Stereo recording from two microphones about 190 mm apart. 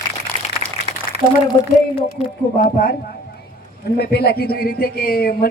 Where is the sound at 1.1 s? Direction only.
35° right (ahead or behind).